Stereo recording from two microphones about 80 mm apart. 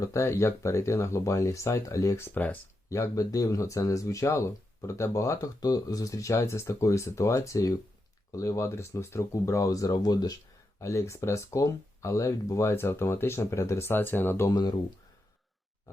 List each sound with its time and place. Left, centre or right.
0.0 s speech: left
2.9 s speech: left
10.8 s speech: left
14.5 s speech: left